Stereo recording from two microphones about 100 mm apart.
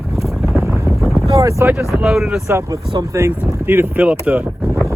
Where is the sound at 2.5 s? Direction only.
30° right (ahead or behind); by 4.5 s 15° right (ahead or behind).